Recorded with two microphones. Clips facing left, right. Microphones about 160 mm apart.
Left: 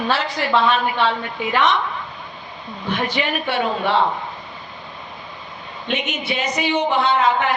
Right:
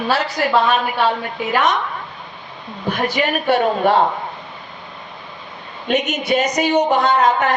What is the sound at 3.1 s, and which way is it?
Speech, 45° right (ahead or behind).